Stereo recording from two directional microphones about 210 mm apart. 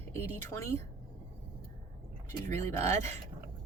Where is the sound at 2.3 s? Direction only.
35° right (ahead or behind).